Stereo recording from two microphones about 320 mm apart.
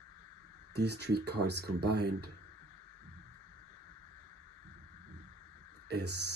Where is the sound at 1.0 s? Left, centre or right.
Right.